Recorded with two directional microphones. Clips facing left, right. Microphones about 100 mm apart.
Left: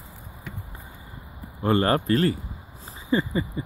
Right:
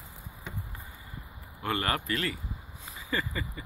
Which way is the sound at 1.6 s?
30° left (ahead or behind).